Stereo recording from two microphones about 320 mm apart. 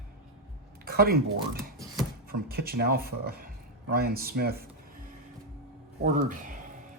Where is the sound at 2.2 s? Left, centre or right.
Right.